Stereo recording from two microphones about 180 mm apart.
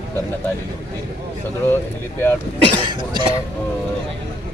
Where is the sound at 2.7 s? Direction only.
25° right (ahead or behind).